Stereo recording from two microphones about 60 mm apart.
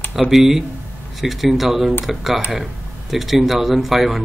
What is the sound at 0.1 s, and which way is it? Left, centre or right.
Speech, centre.